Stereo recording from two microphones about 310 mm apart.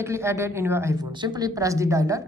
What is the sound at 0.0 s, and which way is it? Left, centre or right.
A woman's voice, centre.